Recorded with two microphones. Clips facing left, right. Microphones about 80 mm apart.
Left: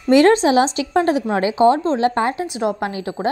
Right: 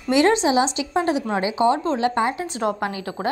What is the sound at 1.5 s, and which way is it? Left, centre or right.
Speech, left.